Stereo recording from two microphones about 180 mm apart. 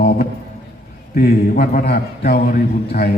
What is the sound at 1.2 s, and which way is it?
A man's voice, 55° left (ahead or behind).